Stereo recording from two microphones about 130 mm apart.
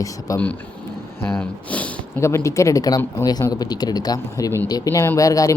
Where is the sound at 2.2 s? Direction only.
20° left (ahead or behind).